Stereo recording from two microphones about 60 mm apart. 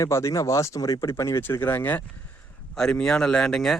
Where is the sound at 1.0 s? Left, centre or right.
Left.